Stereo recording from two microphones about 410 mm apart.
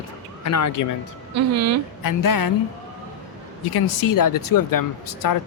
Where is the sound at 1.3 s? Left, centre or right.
Right.